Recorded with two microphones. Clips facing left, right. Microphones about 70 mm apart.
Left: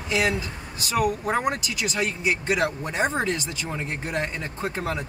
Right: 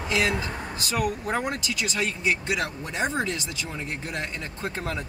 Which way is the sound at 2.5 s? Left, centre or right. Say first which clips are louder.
Left 4 dB; left.